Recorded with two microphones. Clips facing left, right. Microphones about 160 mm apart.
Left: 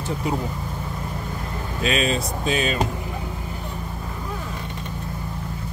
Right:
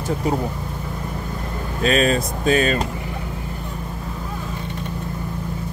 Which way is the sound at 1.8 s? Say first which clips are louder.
Right 5 dB; 45° right (ahead or behind).